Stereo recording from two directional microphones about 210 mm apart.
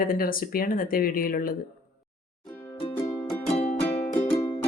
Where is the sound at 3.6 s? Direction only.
25° left (ahead or behind).